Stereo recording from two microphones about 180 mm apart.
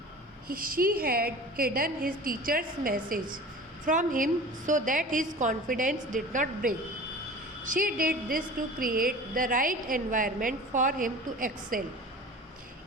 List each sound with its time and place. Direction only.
0.4 s a woman's voice: 50° right (ahead or behind)